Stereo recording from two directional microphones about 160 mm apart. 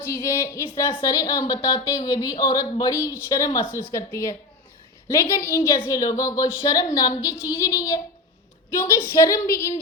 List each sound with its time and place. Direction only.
0.0 s a woman's voice: 15° left (ahead or behind)